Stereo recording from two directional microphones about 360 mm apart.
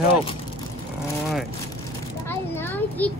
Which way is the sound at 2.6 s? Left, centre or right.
Centre.